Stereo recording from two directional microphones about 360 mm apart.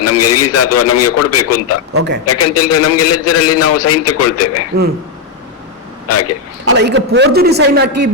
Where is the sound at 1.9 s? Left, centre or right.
Right.